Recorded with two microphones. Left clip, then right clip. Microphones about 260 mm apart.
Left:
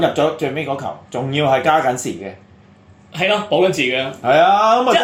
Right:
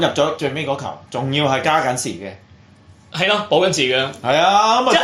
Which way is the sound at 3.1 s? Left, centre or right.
Right.